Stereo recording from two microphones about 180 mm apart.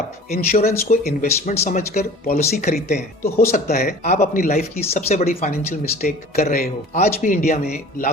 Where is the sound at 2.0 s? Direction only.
55° left (ahead or behind).